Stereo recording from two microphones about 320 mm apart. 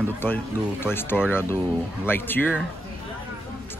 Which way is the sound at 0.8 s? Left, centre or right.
Centre.